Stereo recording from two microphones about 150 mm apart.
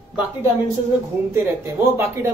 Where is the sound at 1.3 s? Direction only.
15° right (ahead or behind).